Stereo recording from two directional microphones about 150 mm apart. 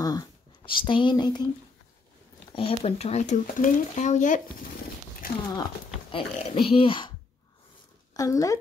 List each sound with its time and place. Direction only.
0.0 s speech: 25° left (ahead or behind)
2.5 s speech: 40° left (ahead or behind)
6.1 s a child's voice: 35° left (ahead or behind)
8.1 s speech: 25° left (ahead or behind)